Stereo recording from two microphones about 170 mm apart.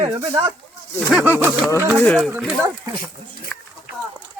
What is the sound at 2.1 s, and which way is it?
Speech, centre (ahead or behind).